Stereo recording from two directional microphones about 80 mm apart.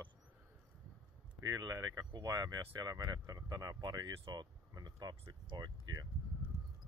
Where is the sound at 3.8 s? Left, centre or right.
Right.